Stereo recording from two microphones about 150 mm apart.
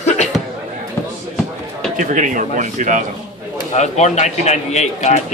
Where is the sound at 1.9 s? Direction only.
55° right (ahead or behind).